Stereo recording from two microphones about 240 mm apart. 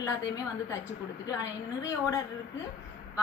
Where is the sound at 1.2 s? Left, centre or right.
Centre.